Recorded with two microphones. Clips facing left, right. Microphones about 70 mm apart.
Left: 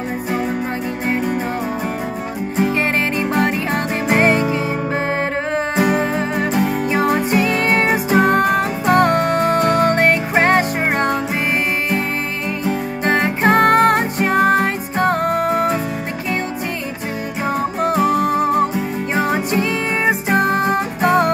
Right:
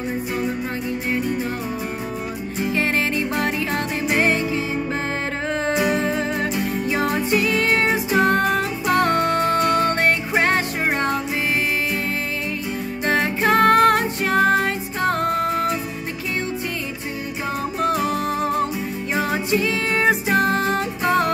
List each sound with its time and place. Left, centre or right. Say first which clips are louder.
1.0 s music: left 5 dB; left
2.7 s music: left 3 dB; left
5.8 s music: left 5 dB; left
6.5 s music: left 6 dB; left
6.9 s music: left 2 dB; left
13.0 s music: left 3 dB; left
17.6 s music: left 4 dB; left